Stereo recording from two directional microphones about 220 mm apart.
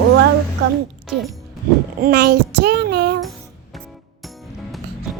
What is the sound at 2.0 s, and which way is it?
A child's voice, 45° right (ahead or behind).